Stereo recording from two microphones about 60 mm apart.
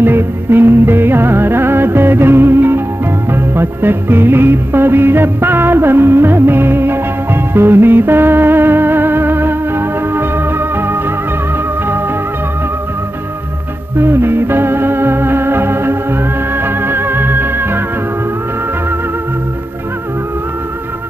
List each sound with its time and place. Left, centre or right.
0.0 s music: right
13.9 s music: right